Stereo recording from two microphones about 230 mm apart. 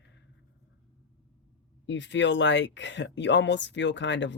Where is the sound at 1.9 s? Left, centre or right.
Left.